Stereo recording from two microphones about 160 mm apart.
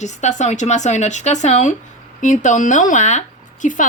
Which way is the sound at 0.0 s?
45° left (ahead or behind).